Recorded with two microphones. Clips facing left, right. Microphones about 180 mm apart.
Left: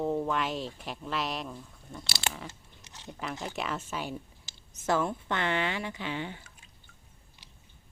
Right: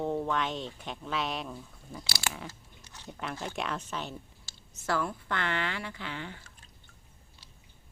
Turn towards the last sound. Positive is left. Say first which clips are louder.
# left 4 dB
turn(degrees=15)  # may be behind; listen again after turning